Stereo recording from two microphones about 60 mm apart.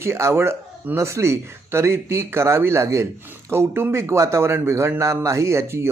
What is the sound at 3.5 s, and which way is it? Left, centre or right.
A man's voice, right.